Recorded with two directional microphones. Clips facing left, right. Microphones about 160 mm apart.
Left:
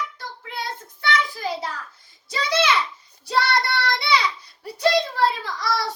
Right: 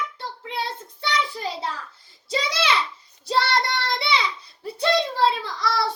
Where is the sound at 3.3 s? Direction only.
25° right (ahead or behind).